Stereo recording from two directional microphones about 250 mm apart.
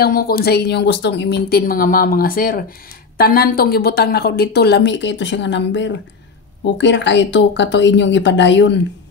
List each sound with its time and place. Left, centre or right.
0.0 s speech: left